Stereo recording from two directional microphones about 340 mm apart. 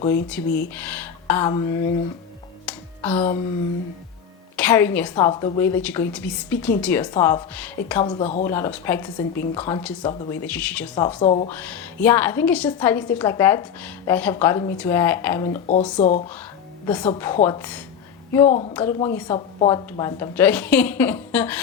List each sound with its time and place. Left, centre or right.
0.3 s a woman's voice: centre
2.6 s a sound: centre
4.5 s a woman's voice: centre
8.4 s a woman's voice: centre
11.2 s speech: left
11.6 s a woman's voice: centre
16.0 s speech: left
16.8 s a woman's voice: centre
18.4 s speech: centre
18.7 s a woman's voice: centre